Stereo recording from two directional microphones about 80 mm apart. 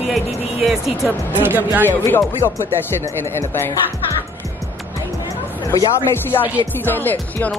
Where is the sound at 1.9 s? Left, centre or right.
Left.